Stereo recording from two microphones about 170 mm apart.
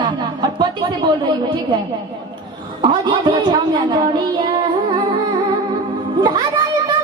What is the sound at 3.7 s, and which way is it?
Child singing, 25° right (ahead or behind).